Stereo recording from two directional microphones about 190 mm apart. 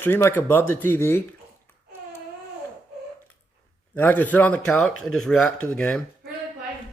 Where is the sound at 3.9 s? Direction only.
10° left (ahead or behind).